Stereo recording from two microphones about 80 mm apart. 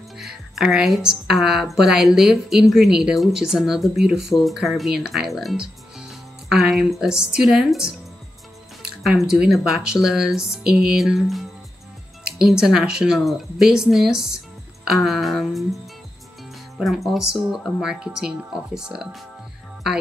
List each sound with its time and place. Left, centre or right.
0.2 s a woman's voice: centre
9.8 s music: centre
12.4 s a woman's voice: centre
17.9 s music: centre